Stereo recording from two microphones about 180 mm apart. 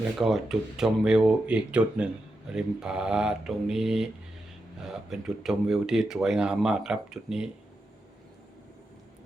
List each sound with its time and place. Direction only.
0.2 s speech: centre (ahead or behind)
5.4 s speech: centre (ahead or behind)